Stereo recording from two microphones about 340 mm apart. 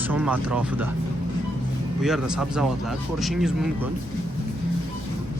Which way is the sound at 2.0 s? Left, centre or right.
Centre.